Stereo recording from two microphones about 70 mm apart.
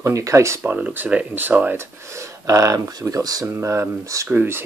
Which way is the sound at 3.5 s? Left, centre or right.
Right.